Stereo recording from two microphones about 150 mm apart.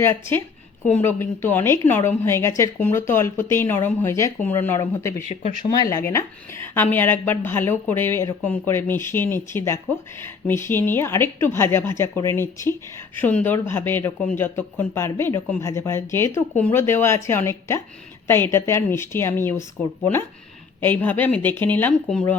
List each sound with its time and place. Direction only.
0.0 s speech: 15° left (ahead or behind)
5.3 s speech: 50° left (ahead or behind)
5.6 s speech: 25° left (ahead or behind)